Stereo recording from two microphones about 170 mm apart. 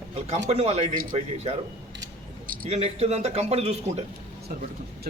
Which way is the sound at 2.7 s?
40° right (ahead or behind).